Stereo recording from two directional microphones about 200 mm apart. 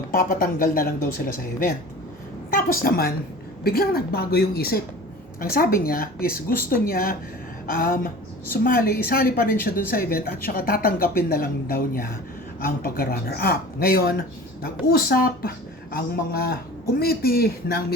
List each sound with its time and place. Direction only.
0.1 s speech: 45° left (ahead or behind)